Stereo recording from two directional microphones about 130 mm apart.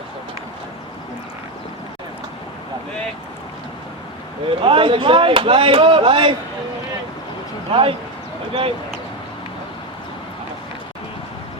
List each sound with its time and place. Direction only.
4.4 s speech: 45° right (ahead or behind)
7.7 s speech: 45° right (ahead or behind)